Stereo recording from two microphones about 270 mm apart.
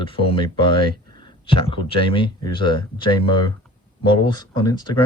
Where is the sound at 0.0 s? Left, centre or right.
Centre.